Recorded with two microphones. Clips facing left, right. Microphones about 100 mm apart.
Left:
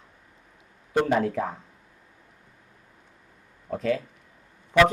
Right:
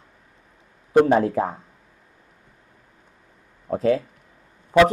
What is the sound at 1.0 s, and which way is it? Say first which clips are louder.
Speech: right 5 dB; 35° right (ahead or behind).